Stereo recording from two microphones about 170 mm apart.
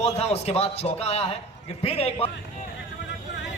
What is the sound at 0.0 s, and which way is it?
A man's voice, 40° left (ahead or behind).